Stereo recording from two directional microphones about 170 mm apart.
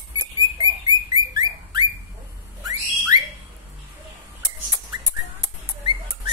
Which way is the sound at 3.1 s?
25° right (ahead or behind).